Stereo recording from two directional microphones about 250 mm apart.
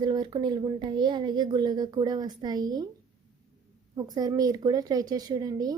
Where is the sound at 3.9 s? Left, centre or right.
Centre.